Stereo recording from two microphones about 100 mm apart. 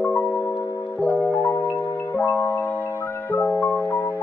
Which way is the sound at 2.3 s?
20° left (ahead or behind).